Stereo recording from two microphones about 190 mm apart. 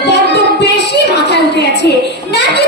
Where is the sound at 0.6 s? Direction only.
65° left (ahead or behind).